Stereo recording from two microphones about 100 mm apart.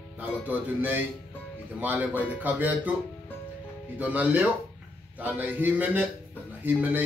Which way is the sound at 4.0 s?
15° right (ahead or behind).